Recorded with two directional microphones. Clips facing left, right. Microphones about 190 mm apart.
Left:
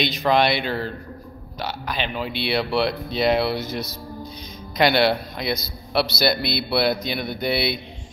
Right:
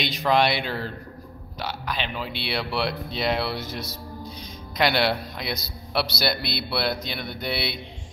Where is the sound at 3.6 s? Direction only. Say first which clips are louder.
Left 5 dB; 30° right (ahead or behind).